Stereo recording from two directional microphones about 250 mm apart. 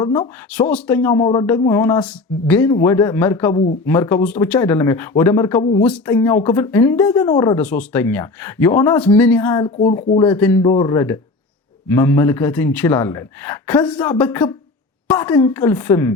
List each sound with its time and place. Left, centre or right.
0.0 s speech: centre
9.6 s speech: left
10.2 s speech: centre